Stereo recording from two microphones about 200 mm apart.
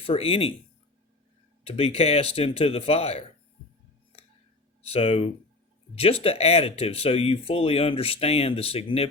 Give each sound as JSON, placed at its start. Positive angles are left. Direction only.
{"t": 0.0, "sound": "speech", "side_deg": 30}
{"t": 1.6, "sound": "speech", "side_deg": 30}
{"t": 4.8, "sound": "speech", "side_deg": 30}